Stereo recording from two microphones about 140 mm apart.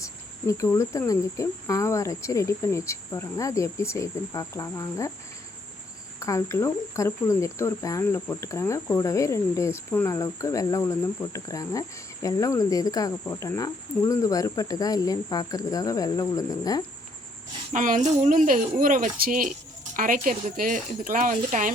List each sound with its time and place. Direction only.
0.0 s cricket: 20° left (ahead or behind)
6.1 s cricket: 20° left (ahead or behind)
9.9 s speech: 15° left (ahead or behind)
10.2 s cricket: 25° left (ahead or behind)
17.7 s speech: 65° right (ahead or behind)